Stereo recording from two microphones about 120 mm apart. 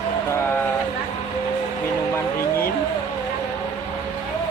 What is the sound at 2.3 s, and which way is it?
Speech, 20° left (ahead or behind).